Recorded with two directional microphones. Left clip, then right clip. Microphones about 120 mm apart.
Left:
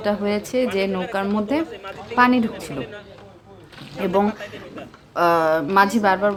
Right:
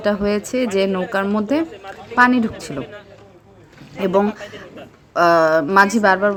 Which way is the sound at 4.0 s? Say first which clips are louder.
Right 3 dB; 30° right (ahead or behind).